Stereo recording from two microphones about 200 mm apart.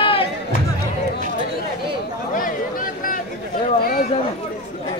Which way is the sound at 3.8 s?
50° left (ahead or behind).